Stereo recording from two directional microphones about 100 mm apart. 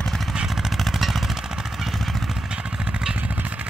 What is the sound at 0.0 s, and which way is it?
Vehicle, 5° left (ahead or behind).